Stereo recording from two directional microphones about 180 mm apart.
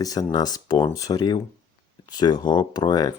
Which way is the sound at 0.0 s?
20° left (ahead or behind).